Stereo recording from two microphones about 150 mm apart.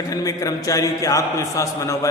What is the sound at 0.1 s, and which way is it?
A man's voice, 25° left (ahead or behind).